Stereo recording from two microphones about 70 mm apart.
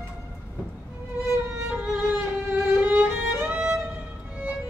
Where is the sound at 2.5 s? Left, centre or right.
Right.